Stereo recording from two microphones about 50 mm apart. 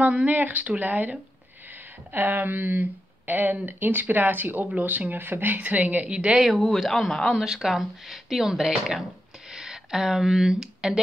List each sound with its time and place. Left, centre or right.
0.0 s a woman's voice: right
0.3 s speech: right
6.0 s a woman's voice: centre
6.4 s speech: centre
7.3 s speech: centre